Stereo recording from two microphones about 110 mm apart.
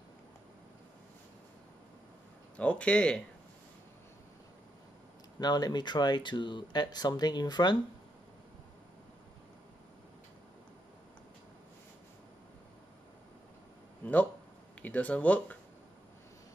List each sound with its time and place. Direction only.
2.5 s speech: 10° left (ahead or behind)
5.4 s speech: 40° left (ahead or behind)
14.8 s speech: 10° left (ahead or behind)